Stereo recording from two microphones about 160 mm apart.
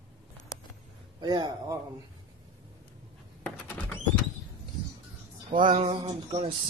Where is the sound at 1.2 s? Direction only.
25° right (ahead or behind).